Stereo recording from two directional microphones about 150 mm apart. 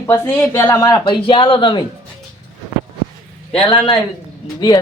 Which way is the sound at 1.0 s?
35° left (ahead or behind).